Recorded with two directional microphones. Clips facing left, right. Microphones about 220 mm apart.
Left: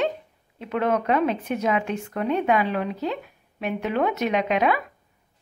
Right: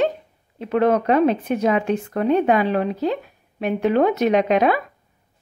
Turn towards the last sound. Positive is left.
turn(degrees=-40)  # may be behind; listen again after turning